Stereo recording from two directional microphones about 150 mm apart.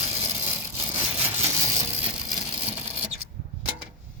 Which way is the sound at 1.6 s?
20° right (ahead or behind).